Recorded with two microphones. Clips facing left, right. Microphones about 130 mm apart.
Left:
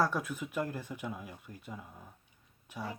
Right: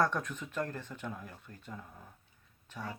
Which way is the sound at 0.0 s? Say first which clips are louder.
Even; 5° left (ahead or behind).